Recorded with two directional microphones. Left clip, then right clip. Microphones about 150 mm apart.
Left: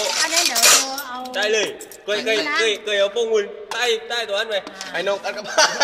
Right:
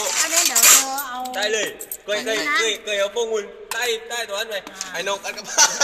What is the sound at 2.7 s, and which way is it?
A man's voice, 55° left (ahead or behind).